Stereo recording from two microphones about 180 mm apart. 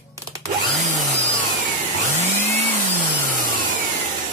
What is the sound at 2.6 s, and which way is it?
Vehicle, 45° right (ahead or behind).